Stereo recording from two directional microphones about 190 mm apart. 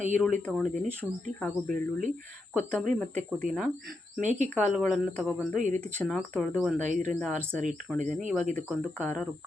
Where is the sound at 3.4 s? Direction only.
5° right (ahead or behind).